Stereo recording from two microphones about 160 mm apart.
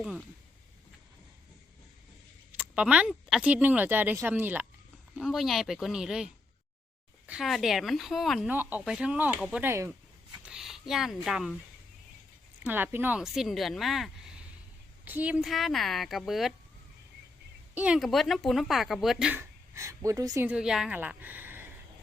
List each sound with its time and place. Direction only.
0.0 s speech: centre (ahead or behind)
2.6 s speech: 5° right (ahead or behind)
5.1 s speech: centre (ahead or behind)
10.4 s speech: 5° right (ahead or behind)
12.6 s speech: 10° right (ahead or behind)
17.7 s speech: 5° right (ahead or behind)
19.3 s speech: 15° right (ahead or behind)
20.5 s a woman's voice: 5° right (ahead or behind)